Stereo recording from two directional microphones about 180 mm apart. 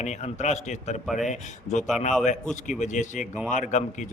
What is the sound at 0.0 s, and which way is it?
Speech, 40° left (ahead or behind).